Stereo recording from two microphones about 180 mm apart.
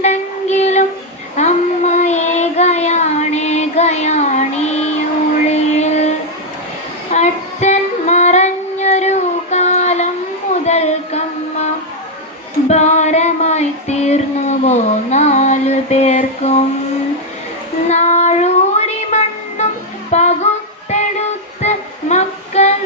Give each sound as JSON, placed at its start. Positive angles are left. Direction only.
{"t": 0.0, "sound": "child singing", "side_deg": 40}
{"t": 5.5, "sound": "a sound", "side_deg": 40}
{"t": 7.1, "sound": "female singing", "side_deg": 40}
{"t": 10.7, "sound": "child singing", "side_deg": 40}
{"t": 12.6, "sound": "child singing", "side_deg": 40}
{"t": 17.8, "sound": "child singing", "side_deg": 40}
{"t": 20.1, "sound": "music", "side_deg": 40}
{"t": 21.6, "sound": "child singing", "side_deg": 40}